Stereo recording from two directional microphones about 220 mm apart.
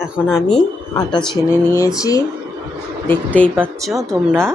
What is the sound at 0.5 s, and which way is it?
A woman's voice, 20° left (ahead or behind).